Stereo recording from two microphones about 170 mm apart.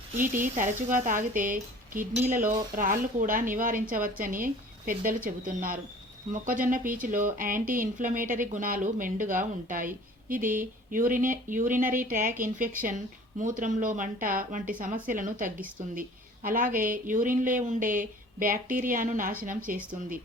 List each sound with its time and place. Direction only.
0.2 s speech: 50° right (ahead or behind)